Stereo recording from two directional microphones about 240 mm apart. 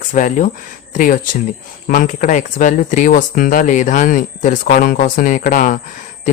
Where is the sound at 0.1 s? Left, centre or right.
Left.